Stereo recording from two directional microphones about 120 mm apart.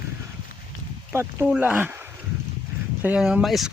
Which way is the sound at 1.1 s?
20° right (ahead or behind).